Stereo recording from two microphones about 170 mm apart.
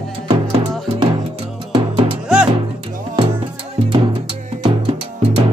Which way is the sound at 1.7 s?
30° right (ahead or behind).